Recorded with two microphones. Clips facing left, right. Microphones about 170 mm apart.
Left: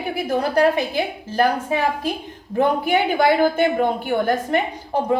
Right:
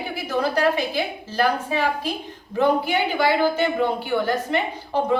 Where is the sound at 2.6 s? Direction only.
50° left (ahead or behind).